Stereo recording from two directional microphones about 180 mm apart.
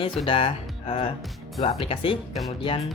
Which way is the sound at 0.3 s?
30° left (ahead or behind).